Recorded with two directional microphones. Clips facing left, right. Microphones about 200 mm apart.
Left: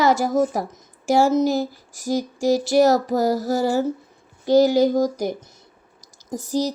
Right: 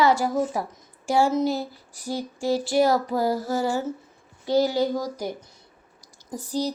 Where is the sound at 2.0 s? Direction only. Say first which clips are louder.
Left 6 dB; 90° left.